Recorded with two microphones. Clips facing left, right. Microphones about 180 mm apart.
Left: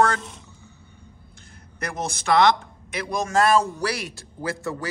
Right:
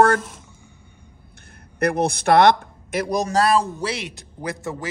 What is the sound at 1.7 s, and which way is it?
A man's voice, 60° right (ahead or behind).